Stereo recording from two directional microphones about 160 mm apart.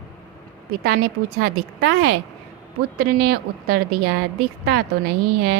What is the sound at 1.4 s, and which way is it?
Speech, 90° right.